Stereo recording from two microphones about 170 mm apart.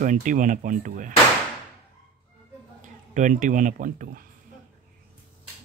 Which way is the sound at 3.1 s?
50° right (ahead or behind).